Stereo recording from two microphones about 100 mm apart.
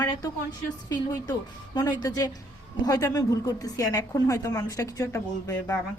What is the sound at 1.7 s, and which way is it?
A woman's voice, 40° left (ahead or behind).